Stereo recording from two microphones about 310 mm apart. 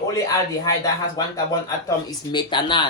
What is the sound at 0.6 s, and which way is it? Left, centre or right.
Speech, centre.